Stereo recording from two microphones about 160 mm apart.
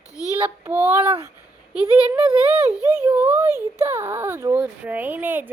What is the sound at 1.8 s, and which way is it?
A child's voice, 25° left (ahead or behind).